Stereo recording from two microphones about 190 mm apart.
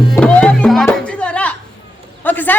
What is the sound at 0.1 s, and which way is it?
Music, 5° left (ahead or behind).